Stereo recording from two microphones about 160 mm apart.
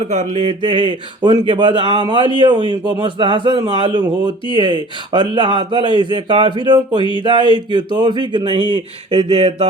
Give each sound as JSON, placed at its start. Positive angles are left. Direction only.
{"t": 0.1, "sound": "speech", "side_deg": -50}